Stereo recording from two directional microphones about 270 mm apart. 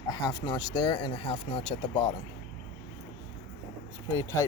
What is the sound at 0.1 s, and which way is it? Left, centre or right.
Speech, centre.